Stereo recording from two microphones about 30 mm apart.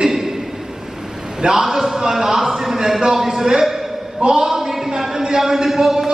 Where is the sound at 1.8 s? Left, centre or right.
Centre.